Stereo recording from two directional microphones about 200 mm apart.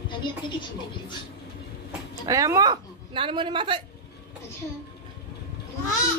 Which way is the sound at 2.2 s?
15° right (ahead or behind).